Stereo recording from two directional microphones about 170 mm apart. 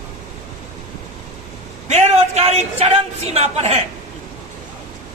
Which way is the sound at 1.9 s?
40° right (ahead or behind).